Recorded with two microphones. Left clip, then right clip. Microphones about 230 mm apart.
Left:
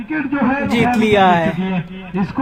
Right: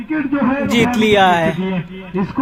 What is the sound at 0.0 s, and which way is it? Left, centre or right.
Speech, left.